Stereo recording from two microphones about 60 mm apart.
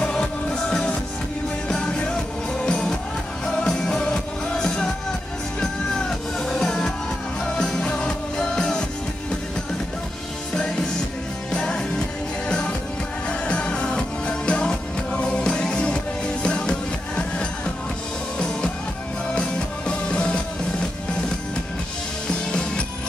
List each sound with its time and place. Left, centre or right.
0.0 s music: centre
10.5 s music: centre
19.2 s music: centre
22.5 s music: centre